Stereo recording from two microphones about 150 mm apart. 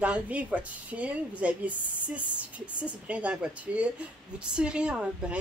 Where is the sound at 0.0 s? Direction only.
10° right (ahead or behind).